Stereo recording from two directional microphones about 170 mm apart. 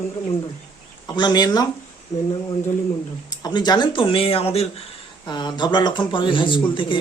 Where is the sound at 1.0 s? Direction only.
25° left (ahead or behind).